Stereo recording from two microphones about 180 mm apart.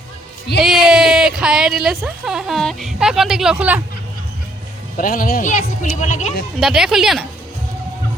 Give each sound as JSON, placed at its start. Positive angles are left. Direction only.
{"t": 0.6, "sound": "speech", "side_deg": 0}
{"t": 4.9, "sound": "a man's voice", "side_deg": 50}
{"t": 6.6, "sound": "speech", "side_deg": 0}